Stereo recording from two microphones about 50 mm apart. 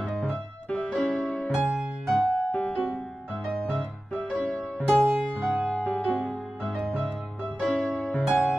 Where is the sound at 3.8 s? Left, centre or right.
Centre.